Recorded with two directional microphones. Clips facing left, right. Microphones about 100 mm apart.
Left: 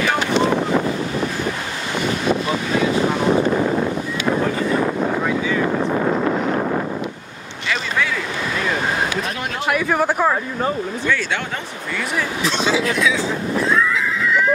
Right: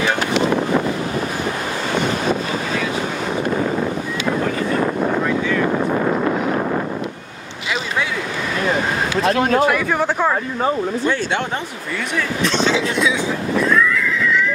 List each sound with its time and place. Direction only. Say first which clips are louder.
9.4 s speech: right 11 dB; 45° right (ahead or behind)
9.7 s speech: even; 10° left (ahead or behind)
11.1 s speech: even; 35° right (ahead or behind)
12.2 s speech: right 3 dB; 5° left (ahead or behind)
13.7 s neigh: right 1 dB; 25° left (ahead or behind)